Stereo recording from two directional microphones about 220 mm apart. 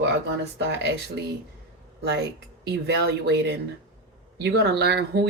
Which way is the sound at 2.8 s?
50° right (ahead or behind).